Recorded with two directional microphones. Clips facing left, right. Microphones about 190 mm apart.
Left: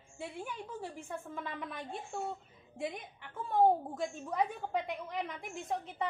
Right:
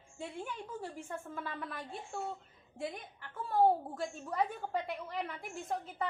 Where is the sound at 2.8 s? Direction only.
Centre (ahead or behind).